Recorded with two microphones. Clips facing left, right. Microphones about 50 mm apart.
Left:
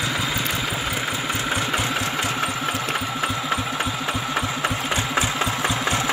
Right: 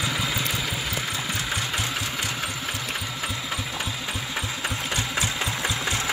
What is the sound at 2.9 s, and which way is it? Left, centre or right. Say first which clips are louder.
Engine: left 6 dB; left.